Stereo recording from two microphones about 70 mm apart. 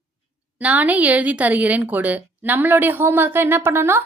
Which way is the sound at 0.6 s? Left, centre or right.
Right.